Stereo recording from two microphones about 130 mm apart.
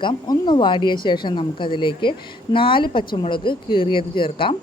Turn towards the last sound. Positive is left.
turn(degrees=40)  # may be behind; listen again after turning